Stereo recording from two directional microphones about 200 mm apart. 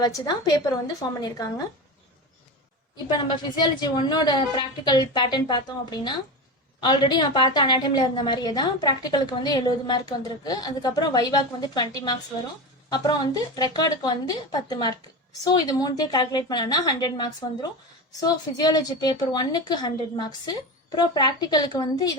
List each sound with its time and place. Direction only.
0.0 s a woman's voice: 20° left (ahead or behind)
3.1 s a woman's voice: 20° left (ahead or behind)
12.9 s a woman's voice: 20° left (ahead or behind)